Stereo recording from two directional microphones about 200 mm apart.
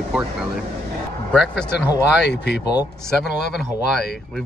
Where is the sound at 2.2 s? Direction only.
55° left (ahead or behind).